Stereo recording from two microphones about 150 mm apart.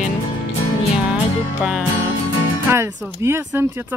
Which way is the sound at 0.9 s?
5° right (ahead or behind).